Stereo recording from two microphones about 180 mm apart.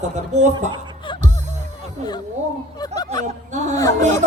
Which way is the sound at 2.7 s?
20° left (ahead or behind).